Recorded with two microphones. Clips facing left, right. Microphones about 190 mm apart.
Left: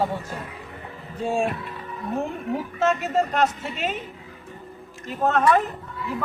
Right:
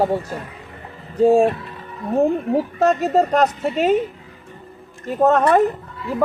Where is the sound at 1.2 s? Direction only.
40° right (ahead or behind).